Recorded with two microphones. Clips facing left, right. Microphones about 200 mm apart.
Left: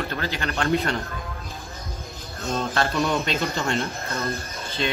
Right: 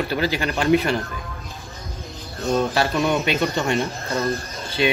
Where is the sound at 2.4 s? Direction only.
5° right (ahead or behind).